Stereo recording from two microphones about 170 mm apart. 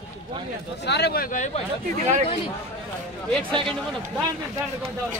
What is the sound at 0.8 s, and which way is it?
Speech, 75° left (ahead or behind).